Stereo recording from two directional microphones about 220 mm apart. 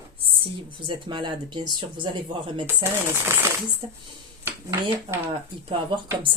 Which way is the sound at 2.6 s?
10° right (ahead or behind).